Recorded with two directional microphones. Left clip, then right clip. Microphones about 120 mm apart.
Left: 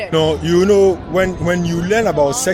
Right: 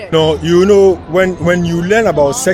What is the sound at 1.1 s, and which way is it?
A man's voice, 90° right.